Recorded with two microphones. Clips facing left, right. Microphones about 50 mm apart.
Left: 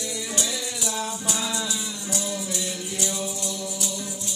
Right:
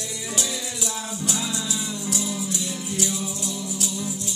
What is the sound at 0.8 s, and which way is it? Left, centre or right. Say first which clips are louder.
Music: left 1 dB; centre.